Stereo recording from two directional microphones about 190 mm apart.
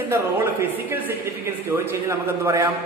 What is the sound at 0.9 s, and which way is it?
Speech, 10° right (ahead or behind).